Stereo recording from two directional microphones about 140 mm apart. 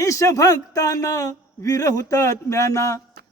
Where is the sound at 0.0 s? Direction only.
20° left (ahead or behind).